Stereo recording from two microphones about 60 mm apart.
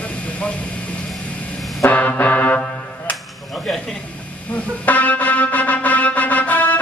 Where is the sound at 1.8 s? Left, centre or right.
Left.